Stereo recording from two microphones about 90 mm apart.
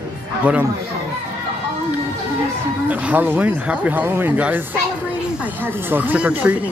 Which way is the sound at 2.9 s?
15° right (ahead or behind).